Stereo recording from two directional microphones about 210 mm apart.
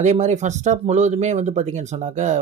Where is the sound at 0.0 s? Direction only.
35° right (ahead or behind).